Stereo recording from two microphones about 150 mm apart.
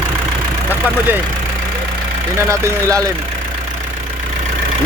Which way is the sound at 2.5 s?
20° right (ahead or behind).